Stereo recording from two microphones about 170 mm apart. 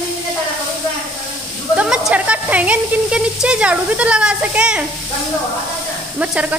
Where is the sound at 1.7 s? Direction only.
5° right (ahead or behind).